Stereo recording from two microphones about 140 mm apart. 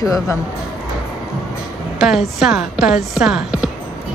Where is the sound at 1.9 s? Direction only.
Centre (ahead or behind).